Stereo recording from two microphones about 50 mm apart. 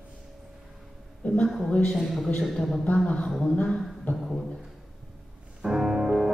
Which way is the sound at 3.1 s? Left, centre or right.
Left.